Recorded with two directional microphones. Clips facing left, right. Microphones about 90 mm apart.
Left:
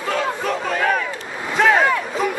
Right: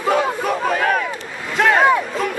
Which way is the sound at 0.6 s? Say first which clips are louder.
Right 2 dB; 5° right (ahead or behind).